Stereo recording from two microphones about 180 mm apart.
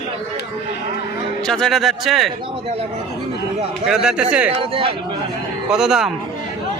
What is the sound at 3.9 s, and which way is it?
Speech, 5° right (ahead or behind).